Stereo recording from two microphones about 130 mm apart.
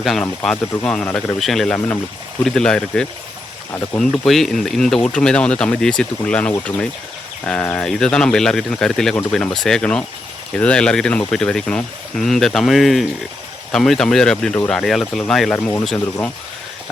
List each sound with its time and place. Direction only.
0.0 s speech: centre (ahead or behind)
1.4 s speech: centre (ahead or behind)
15.5 s speech: 20° left (ahead or behind)